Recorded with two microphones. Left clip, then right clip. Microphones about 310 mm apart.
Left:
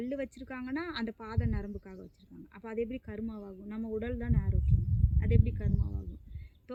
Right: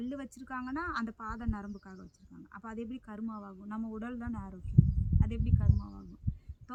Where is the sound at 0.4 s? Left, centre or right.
Right.